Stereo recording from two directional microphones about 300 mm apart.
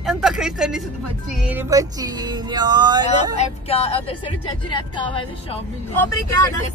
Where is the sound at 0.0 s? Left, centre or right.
Centre.